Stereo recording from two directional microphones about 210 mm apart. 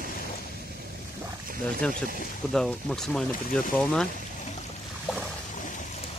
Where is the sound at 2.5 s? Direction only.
5° left (ahead or behind).